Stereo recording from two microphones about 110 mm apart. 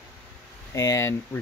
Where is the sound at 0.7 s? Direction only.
25° left (ahead or behind).